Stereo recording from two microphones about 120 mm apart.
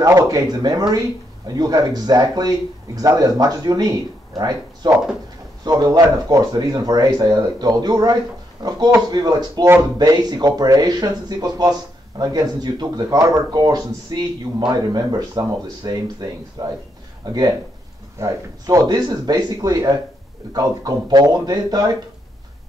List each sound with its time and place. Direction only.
0.0 s speech: 25° right (ahead or behind)